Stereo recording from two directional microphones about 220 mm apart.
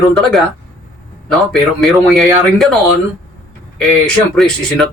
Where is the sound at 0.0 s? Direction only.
Centre (ahead or behind).